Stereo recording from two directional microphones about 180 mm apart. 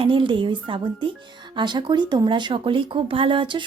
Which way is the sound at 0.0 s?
30° right (ahead or behind).